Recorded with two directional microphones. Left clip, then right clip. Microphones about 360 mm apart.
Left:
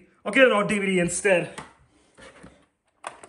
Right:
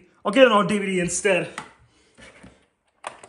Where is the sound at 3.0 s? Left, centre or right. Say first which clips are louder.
Right 2 dB; centre.